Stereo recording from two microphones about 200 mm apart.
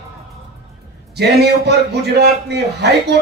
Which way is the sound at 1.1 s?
55° right (ahead or behind).